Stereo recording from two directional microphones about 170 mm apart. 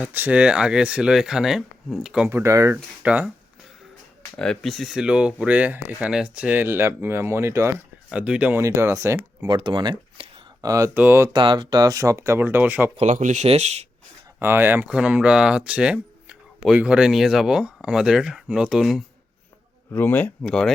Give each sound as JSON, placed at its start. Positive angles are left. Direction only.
{"t": 0.0, "sound": "speech", "side_deg": -10}
{"t": 4.4, "sound": "speech", "side_deg": 0}
{"t": 9.5, "sound": "speech", "side_deg": -25}
{"t": 11.3, "sound": "speech", "side_deg": -30}
{"t": 13.0, "sound": "speech", "side_deg": -45}
{"t": 14.3, "sound": "speech", "side_deg": -10}
{"t": 19.9, "sound": "speech", "side_deg": 10}